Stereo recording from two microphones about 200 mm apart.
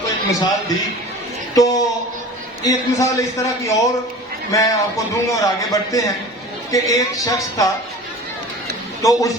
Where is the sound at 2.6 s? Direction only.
15° left (ahead or behind).